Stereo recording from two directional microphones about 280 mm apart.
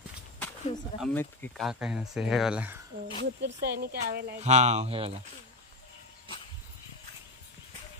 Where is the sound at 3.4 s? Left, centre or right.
Right; by 5.1 s centre.